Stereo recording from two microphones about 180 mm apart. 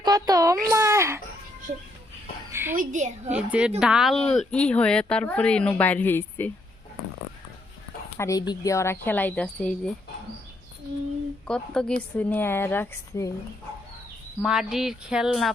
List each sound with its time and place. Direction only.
0.0 s a child's voice: 20° right (ahead or behind)
2.5 s a sound: 10° right (ahead or behind)
2.7 s a woman's voice: 45° right (ahead or behind)
3.2 s a woman's voice: 5° right (ahead or behind); by 6.5 s 10° left (ahead or behind)
8.2 s speech: 20° left (ahead or behind)
11.4 s a woman's voice: 5° left (ahead or behind)
14.4 s a woman's voice: 5° right (ahead or behind)